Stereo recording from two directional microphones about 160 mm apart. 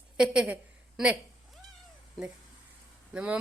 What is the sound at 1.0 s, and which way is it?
Cat, centre (ahead or behind).